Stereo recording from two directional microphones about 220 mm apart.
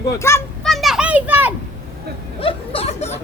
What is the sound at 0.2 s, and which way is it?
Speech, 10° left (ahead or behind).